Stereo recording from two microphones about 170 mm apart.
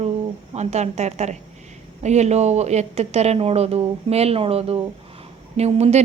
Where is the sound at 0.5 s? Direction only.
40° right (ahead or behind).